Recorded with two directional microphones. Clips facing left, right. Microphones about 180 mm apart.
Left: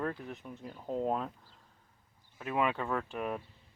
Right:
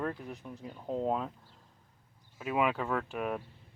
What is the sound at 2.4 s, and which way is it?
Speech, 5° right (ahead or behind).